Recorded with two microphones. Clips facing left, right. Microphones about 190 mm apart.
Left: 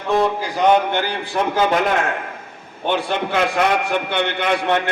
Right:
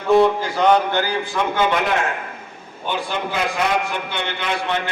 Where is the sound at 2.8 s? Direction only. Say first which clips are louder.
Left 4 dB; 65° left (ahead or behind).